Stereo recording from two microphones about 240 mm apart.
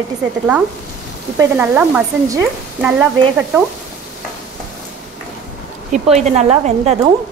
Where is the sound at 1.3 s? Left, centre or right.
Centre.